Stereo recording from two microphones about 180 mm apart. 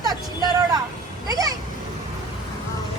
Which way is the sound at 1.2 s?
20° right (ahead or behind).